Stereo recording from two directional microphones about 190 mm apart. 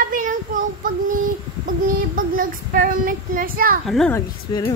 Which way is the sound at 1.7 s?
45° right (ahead or behind).